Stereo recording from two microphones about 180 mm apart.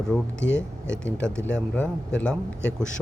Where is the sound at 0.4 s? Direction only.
85° left.